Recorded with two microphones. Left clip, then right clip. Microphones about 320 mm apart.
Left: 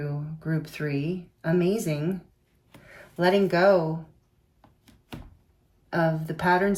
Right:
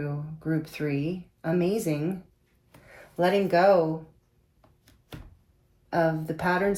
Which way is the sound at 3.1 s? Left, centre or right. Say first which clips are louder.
Even; centre.